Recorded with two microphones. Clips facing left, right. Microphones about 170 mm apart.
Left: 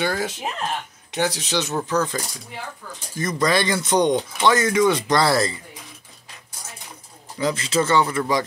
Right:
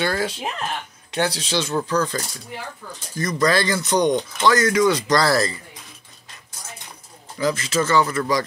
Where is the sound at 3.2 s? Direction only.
25° left (ahead or behind).